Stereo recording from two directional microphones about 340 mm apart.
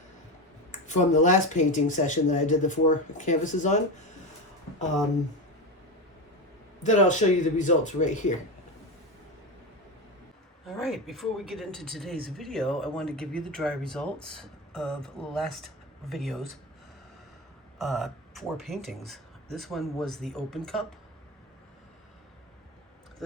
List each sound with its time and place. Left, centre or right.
0.7 s speech: left
6.8 s speech: left
10.8 s speech: centre
17.7 s speech: centre